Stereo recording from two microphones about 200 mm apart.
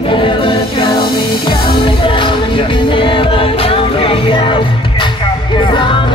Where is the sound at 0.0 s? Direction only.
25° left (ahead or behind).